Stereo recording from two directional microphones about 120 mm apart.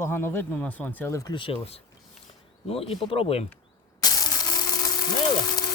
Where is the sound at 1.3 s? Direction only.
50° left (ahead or behind).